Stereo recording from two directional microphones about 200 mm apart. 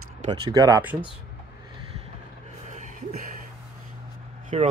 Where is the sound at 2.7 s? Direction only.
40° right (ahead or behind).